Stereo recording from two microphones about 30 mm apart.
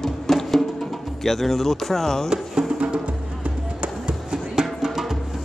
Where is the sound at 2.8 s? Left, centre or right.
Right.